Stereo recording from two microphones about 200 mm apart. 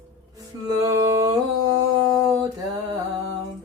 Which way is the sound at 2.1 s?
15° right (ahead or behind).